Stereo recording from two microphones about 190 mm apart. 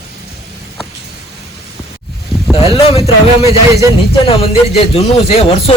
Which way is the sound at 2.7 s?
30° left (ahead or behind).